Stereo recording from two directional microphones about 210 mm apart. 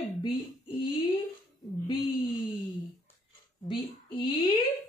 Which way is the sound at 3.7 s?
25° left (ahead or behind).